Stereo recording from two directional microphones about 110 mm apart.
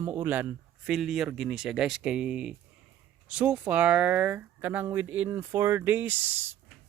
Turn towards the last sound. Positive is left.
turn(degrees=-20)  # may be behind; listen again after turning